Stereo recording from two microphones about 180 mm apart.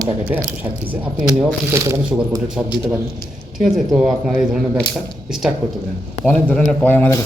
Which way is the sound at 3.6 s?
Centre (ahead or behind).